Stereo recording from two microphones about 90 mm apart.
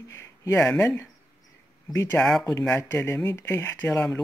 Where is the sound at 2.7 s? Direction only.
20° left (ahead or behind).